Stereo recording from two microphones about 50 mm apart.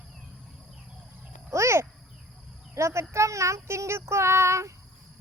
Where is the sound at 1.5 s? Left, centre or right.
Right.